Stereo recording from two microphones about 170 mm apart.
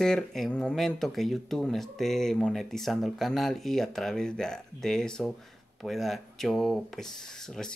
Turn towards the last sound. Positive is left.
turn(degrees=5)  # may be behind; listen again after turning